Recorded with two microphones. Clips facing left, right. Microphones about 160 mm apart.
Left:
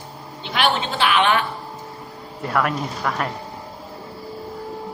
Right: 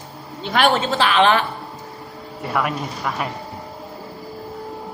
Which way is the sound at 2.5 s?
5° right (ahead or behind).